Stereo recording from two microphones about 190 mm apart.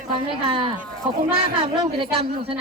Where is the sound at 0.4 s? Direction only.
25° right (ahead or behind).